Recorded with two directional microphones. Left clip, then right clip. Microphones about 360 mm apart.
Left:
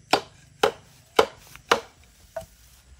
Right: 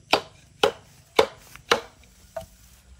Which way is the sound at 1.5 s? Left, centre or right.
Centre.